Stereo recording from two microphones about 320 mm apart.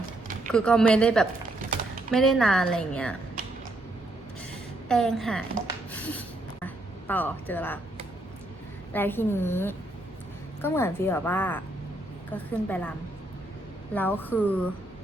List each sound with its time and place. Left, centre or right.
0.5 s a woman's voice: centre
3.4 s a sound: right
4.9 s a woman's voice: centre
5.9 s a sound: centre
8.9 s a woman's voice: centre
13.9 s a woman's voice: centre